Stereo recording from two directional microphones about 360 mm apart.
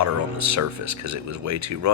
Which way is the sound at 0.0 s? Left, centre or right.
Right.